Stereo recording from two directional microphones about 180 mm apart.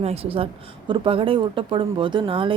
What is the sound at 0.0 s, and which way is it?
A woman's voice, 35° right (ahead or behind).